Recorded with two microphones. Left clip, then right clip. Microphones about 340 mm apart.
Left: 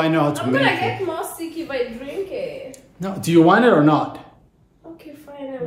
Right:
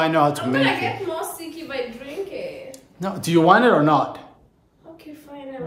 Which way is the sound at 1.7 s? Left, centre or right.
Centre.